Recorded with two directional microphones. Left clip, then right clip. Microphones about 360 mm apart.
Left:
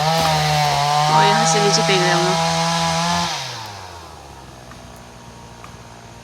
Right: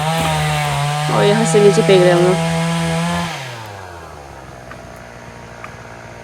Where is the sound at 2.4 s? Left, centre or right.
Centre.